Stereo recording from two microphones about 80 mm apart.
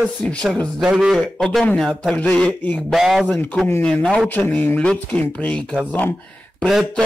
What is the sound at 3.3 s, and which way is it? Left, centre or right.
Speech, left.